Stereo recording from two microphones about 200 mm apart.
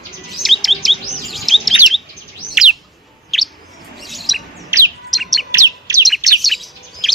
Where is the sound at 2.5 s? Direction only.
5° right (ahead or behind).